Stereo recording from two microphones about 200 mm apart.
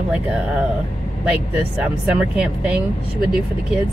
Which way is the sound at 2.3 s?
5° right (ahead or behind).